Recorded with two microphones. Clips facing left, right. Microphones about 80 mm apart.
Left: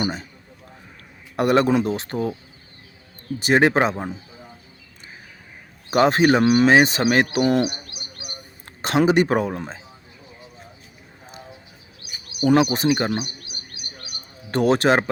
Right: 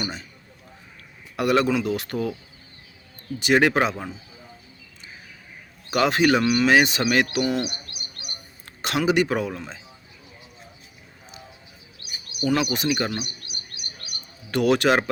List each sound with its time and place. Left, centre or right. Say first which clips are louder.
0.0 s a man's voice: left 6 dB; left
1.4 s speech: left 3 dB; left
3.4 s speech: left 2 dB; left
5.9 s speech: left 3 dB; left
8.8 s speech: left 4 dB; left
12.6 s speech: left 4 dB; left
14.5 s speech: left 2 dB; left